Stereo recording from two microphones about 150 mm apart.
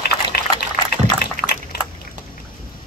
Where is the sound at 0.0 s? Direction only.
90° left.